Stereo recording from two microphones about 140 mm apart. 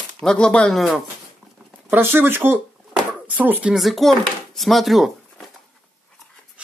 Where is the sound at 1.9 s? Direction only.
15° right (ahead or behind).